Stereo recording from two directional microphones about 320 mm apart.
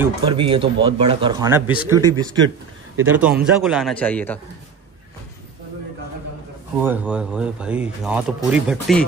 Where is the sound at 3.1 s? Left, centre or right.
Centre.